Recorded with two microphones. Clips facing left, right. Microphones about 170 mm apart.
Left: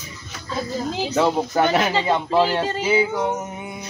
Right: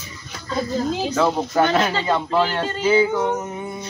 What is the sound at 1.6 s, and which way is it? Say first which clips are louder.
Speech: even; 10° left (ahead or behind).